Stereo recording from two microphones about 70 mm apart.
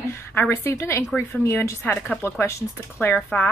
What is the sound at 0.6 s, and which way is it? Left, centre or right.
A woman's voice, left.